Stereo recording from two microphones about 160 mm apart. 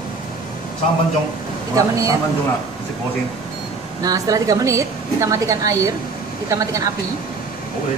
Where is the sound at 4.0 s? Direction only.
25° right (ahead or behind).